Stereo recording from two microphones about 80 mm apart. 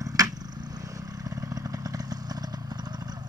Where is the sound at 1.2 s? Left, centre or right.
Right.